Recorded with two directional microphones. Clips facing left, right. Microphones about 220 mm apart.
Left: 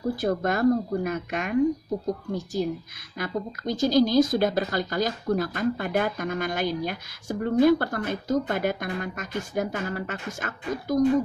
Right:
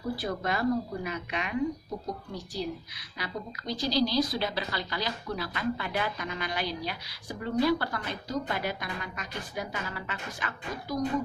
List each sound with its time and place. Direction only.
0.1 s a woman's voice: 45° left (ahead or behind)